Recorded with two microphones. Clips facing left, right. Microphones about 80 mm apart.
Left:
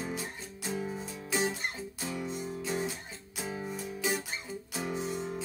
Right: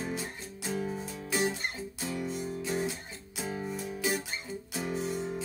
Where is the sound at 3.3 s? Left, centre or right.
Centre.